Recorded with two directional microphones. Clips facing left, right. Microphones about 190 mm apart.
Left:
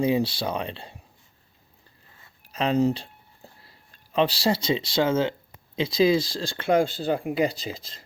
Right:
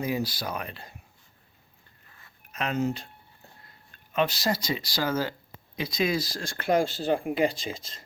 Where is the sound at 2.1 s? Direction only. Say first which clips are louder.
Left 5 dB; 30° left (ahead or behind).